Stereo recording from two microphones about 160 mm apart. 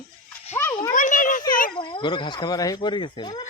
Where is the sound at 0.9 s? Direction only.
55° left (ahead or behind).